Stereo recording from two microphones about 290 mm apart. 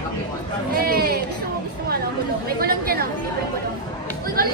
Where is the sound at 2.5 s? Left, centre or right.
Right.